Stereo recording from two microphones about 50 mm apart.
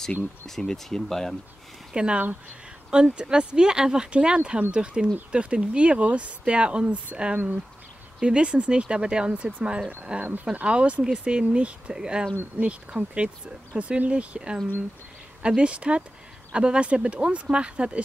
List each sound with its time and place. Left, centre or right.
0.5 s speech: centre
2.0 s speech: right